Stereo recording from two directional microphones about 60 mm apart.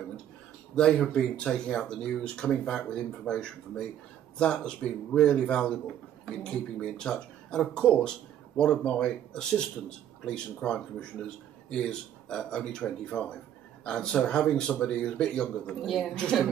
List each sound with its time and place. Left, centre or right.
0.7 s speech: centre